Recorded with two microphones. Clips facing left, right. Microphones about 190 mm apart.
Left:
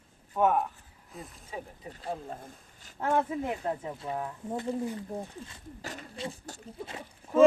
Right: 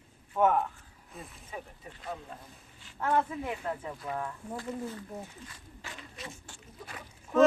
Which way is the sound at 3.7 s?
25° left (ahead or behind).